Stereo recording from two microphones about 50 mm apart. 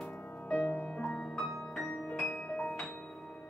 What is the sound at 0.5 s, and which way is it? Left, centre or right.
Music, left.